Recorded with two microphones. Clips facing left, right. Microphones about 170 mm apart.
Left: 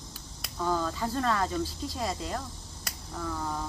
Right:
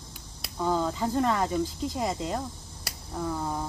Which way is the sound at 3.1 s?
20° right (ahead or behind).